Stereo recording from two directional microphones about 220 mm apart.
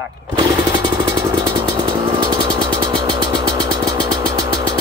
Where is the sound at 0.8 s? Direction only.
20° right (ahead or behind).